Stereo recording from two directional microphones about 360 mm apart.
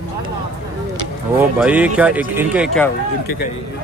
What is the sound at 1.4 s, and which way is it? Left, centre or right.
A man's voice, centre.